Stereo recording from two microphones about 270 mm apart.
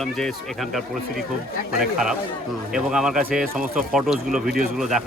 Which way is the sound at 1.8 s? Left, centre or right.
Centre.